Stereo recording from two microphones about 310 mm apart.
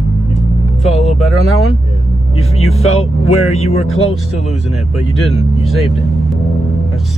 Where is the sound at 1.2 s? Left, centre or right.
Centre.